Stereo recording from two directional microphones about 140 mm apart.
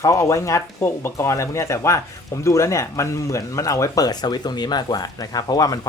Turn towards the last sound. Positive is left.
turn(degrees=25)  # may be behind; listen again after turning